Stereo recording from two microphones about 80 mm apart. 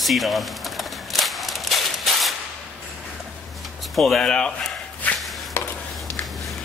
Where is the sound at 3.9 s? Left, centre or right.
Centre.